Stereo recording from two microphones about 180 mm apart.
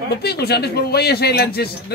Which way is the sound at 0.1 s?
60° left (ahead or behind).